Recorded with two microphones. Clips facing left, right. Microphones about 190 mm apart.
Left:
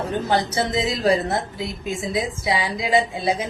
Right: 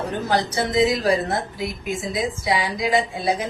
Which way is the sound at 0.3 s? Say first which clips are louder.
Even; 25° left (ahead or behind).